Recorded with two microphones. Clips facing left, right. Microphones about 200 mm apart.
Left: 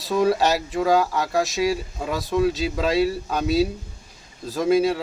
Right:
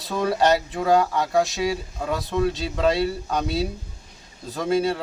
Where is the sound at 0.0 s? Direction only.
5° left (ahead or behind).